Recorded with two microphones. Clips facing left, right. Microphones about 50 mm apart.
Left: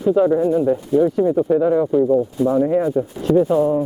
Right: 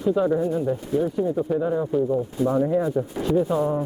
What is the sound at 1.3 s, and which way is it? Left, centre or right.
Speech, centre.